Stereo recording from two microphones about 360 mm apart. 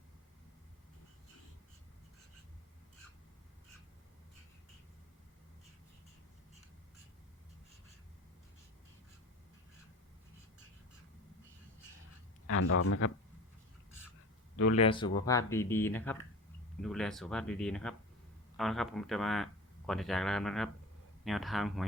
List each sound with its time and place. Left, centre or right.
12.5 s speech: left
14.5 s speech: left
14.8 s speech: centre